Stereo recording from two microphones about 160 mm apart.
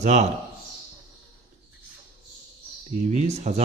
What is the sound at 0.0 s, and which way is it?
Speech, 45° right (ahead or behind).